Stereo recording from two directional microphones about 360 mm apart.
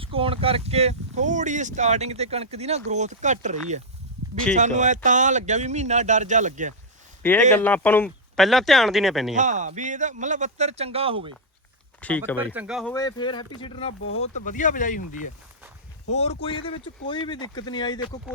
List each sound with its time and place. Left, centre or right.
0.0 s speech: centre
7.2 s speech: centre
9.3 s speech: right
11.9 s speech: centre